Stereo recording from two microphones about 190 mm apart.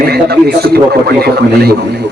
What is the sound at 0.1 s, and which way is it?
A man's voice, 55° right (ahead or behind).